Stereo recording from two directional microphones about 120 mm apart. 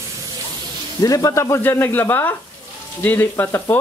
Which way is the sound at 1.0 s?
30° left (ahead or behind).